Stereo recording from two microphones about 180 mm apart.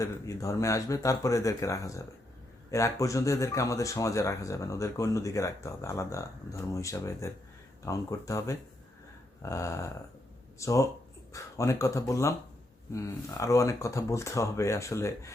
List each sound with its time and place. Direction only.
0.0 s speech: 15° left (ahead or behind)